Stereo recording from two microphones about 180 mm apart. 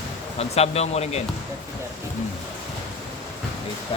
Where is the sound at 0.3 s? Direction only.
35° left (ahead or behind).